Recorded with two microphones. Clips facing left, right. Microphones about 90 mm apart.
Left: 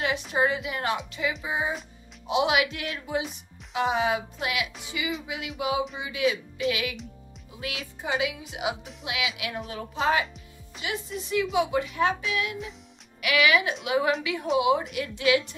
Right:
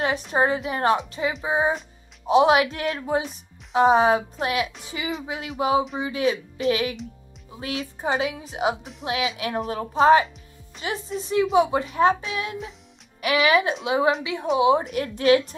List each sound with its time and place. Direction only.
0.3 s a woman's voice: 35° right (ahead or behind)